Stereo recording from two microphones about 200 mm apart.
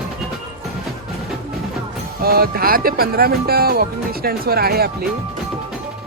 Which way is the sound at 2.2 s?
50° right (ahead or behind).